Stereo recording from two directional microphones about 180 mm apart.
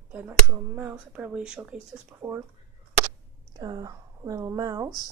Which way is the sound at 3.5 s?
20° right (ahead or behind).